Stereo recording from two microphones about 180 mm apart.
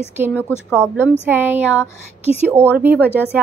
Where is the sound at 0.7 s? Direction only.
10° right (ahead or behind).